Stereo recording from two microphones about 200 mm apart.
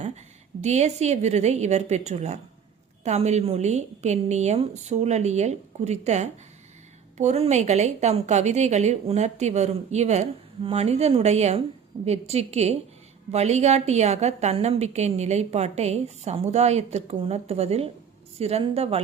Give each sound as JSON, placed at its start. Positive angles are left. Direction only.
{"t": 0.6, "sound": "a woman's voice", "side_deg": -35}